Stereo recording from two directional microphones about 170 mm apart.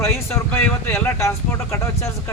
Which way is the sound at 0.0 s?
15° left (ahead or behind).